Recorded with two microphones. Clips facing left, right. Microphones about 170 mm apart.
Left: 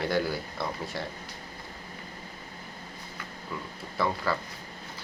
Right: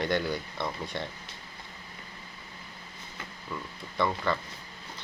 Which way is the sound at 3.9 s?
5° left (ahead or behind).